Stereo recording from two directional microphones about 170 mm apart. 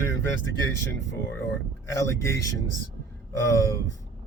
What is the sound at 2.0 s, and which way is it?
Speech, 15° left (ahead or behind).